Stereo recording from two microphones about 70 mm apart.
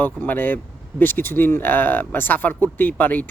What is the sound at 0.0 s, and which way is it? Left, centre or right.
Speech, left.